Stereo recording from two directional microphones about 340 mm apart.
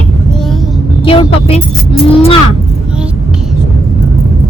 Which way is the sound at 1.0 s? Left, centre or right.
Centre.